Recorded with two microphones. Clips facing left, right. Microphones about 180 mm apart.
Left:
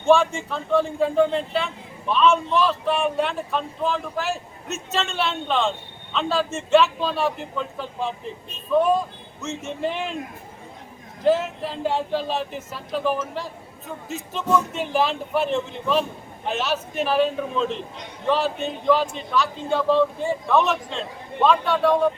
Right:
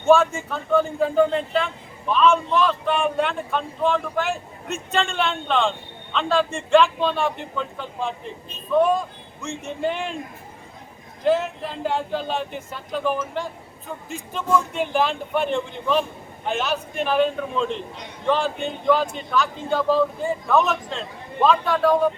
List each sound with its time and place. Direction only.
0.0 s a man's voice: 5° right (ahead or behind)
11.3 s a man's voice: 5° left (ahead or behind)